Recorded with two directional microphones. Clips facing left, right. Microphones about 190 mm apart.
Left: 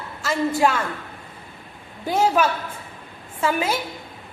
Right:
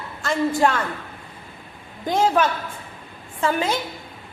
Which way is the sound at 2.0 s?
10° left (ahead or behind).